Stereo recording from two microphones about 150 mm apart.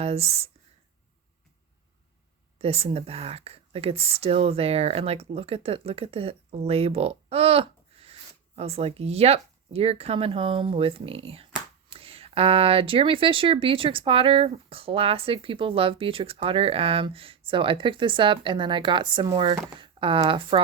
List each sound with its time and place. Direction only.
0.0 s speech: 40° right (ahead or behind)
2.6 s speech: 40° right (ahead or behind)